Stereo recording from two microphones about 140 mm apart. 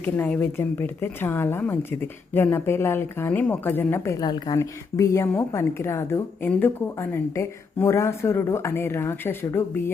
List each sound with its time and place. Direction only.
0.0 s a woman's voice: 15° left (ahead or behind)